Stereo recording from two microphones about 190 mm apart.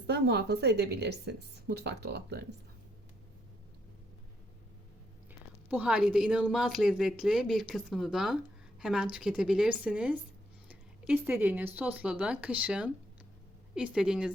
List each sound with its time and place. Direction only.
0.1 s a woman's voice: 60° right (ahead or behind)
5.6 s speech: 5° right (ahead or behind)